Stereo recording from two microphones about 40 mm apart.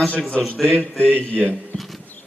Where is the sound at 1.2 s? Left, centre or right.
Left.